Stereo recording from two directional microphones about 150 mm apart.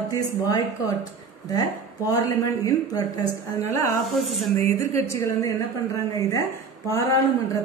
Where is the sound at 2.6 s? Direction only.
25° left (ahead or behind).